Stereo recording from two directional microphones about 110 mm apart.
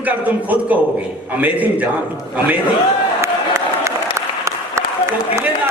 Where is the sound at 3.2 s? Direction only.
25° right (ahead or behind).